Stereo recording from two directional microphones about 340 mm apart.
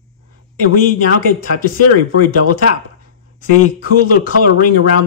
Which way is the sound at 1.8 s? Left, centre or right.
Left.